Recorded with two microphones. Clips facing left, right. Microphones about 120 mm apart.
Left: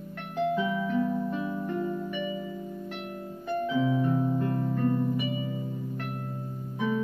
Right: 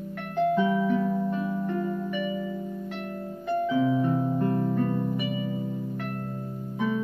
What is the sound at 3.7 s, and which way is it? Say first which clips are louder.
Music: right 1 dB; 30° right (ahead or behind).